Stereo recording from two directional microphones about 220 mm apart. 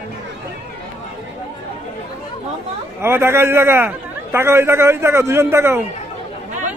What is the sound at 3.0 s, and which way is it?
A man's voice, 10° right (ahead or behind).